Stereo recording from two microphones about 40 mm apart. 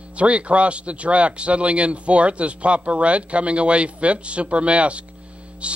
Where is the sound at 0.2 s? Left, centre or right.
Right.